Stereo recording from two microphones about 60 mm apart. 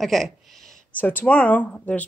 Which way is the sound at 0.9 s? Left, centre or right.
Left.